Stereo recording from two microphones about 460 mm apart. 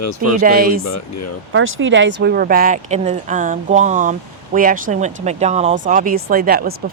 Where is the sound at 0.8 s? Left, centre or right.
Left.